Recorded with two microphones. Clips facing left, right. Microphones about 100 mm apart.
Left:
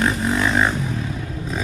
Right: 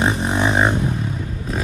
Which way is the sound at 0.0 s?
20° right (ahead or behind).